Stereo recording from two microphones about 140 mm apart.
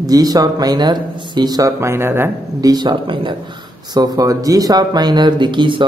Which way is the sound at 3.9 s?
25° right (ahead or behind).